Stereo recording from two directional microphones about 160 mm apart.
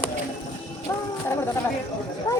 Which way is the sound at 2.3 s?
20° left (ahead or behind).